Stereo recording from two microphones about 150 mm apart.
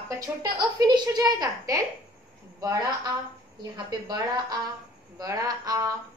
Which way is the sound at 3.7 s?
30° right (ahead or behind).